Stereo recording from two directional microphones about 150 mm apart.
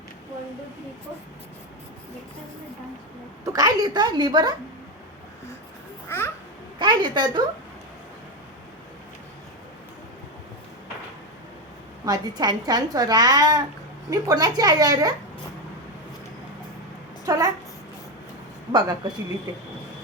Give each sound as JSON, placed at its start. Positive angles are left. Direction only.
{"t": 3.4, "sound": "speech", "side_deg": -25}
{"t": 6.1, "sound": "babbling", "side_deg": 15}
{"t": 6.7, "sound": "a woman's voice", "side_deg": -30}
{"t": 12.0, "sound": "speech", "side_deg": -25}
{"t": 17.2, "sound": "a woman's voice", "side_deg": -25}
{"t": 18.7, "sound": "speech", "side_deg": -30}